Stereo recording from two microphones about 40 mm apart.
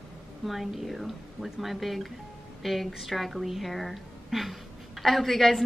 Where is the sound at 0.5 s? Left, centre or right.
Centre.